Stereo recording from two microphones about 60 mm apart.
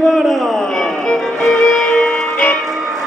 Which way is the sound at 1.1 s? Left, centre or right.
Centre.